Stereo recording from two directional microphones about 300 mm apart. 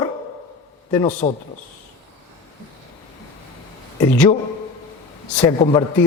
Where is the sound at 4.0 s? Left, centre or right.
Centre.